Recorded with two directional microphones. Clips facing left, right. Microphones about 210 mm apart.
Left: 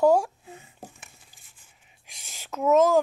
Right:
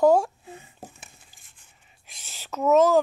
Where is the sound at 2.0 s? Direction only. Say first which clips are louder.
Right 1 dB; 10° left (ahead or behind).